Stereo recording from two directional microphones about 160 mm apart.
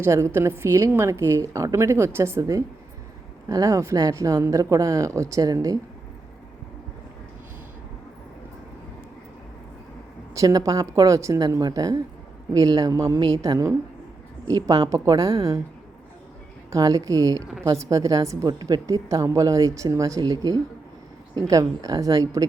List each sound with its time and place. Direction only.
0.0 s a woman's voice: 15° right (ahead or behind)
10.3 s a woman's voice: 20° right (ahead or behind)
16.7 s a woman's voice: 20° right (ahead or behind)